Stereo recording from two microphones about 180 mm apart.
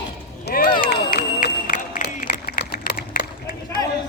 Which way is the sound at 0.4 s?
55° left (ahead or behind).